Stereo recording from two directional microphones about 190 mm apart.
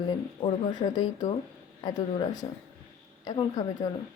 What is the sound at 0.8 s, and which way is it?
Speech, 20° left (ahead or behind).